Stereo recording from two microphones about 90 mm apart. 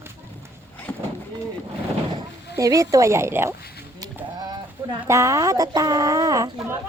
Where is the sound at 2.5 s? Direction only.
40° right (ahead or behind).